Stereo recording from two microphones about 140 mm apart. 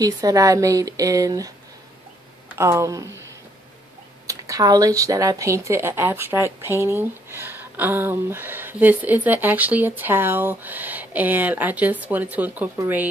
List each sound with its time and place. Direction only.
0.0 s speech: 25° right (ahead or behind)
2.5 s speech: 20° right (ahead or behind)
4.3 s speech: 25° right (ahead or behind)